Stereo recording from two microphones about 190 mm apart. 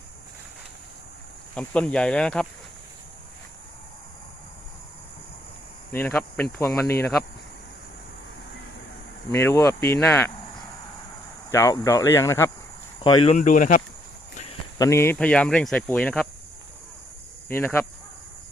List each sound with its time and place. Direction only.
1.5 s speech: 5° left (ahead or behind)
5.9 s speech: 10° left (ahead or behind)
9.3 s speech: 15° left (ahead or behind)
11.5 s speech: 15° left (ahead or behind)
13.0 s speech: 25° left (ahead or behind)
13.3 s speech: 45° left (ahead or behind)
14.8 s speech: 15° left (ahead or behind)
17.5 s speech: 10° left (ahead or behind)